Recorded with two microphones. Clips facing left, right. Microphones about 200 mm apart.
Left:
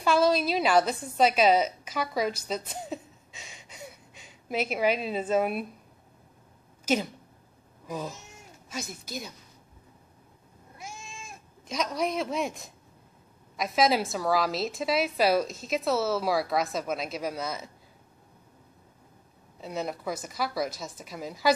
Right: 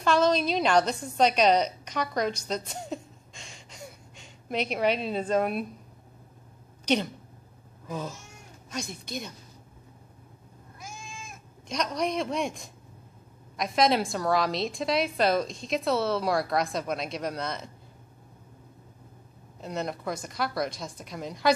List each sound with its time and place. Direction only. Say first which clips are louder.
0.0 s a woman's voice: even; 5° left (ahead or behind)
6.9 s speech: right 1 dB; 5° left (ahead or behind)
8.6 s a woman's voice: right 2 dB; 5° left (ahead or behind)
10.8 s goat: even; 30° left (ahead or behind)
11.7 s a woman's voice: even; 5° left (ahead or behind)
19.6 s a woman's voice: even; 5° left (ahead or behind)